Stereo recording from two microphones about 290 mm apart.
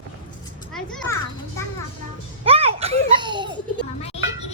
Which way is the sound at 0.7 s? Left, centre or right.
Centre.